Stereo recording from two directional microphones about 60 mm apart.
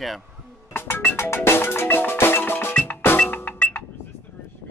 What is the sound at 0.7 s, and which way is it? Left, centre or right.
Marimba, left.